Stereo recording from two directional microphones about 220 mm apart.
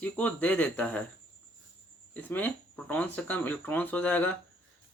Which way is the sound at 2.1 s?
10° left (ahead or behind).